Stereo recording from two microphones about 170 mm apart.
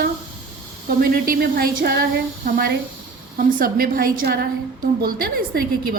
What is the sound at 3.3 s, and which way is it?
A woman's voice, 55° right (ahead or behind).